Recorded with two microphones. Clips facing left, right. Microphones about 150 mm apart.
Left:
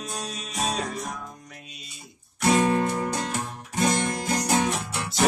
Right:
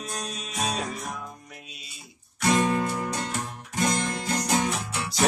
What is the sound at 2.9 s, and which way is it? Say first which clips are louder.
Music: left 2 dB; 30° left (ahead or behind).